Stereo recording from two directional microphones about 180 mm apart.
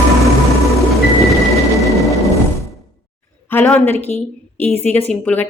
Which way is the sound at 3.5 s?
10° left (ahead or behind).